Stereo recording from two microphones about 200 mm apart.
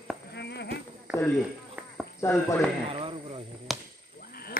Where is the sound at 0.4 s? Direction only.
55° left (ahead or behind).